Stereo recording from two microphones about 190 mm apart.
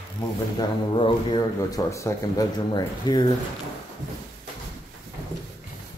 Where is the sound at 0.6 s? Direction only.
25° left (ahead or behind).